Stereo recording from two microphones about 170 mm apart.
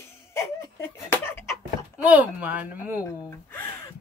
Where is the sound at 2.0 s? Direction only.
10° right (ahead or behind).